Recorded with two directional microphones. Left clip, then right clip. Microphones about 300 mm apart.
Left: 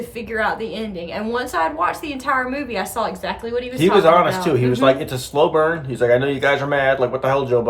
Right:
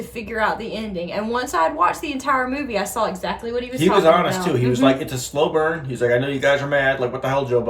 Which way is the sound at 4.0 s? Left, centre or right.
Centre.